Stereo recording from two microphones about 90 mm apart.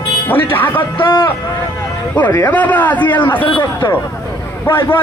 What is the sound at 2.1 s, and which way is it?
A man's voice, 20° left (ahead or behind).